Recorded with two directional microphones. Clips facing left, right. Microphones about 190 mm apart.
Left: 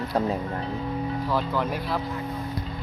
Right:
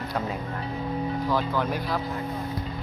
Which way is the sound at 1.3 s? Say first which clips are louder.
Even; centre (ahead or behind).